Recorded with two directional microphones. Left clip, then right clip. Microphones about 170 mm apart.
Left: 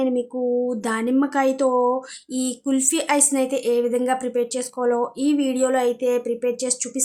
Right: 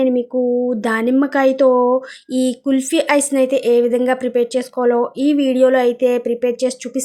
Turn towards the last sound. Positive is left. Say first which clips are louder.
# right 6 dB
turn(degrees=-25)  # may be behind; listen again after turning